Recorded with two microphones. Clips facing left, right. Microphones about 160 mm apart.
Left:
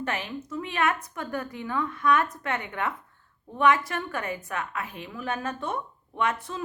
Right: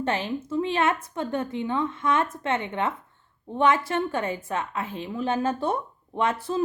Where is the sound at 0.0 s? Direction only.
30° right (ahead or behind).